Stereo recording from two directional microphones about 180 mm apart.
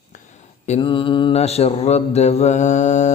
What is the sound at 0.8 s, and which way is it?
Mantra, 30° left (ahead or behind).